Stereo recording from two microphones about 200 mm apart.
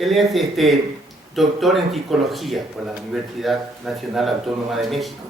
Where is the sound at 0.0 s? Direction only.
Centre (ahead or behind).